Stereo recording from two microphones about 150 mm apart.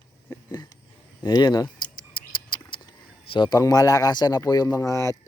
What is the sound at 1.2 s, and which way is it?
Speech, 25° left (ahead or behind).